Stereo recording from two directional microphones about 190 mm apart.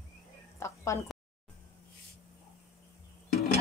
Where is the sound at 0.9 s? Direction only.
15° left (ahead or behind).